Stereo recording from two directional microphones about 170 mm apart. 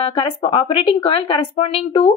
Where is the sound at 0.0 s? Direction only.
30° left (ahead or behind).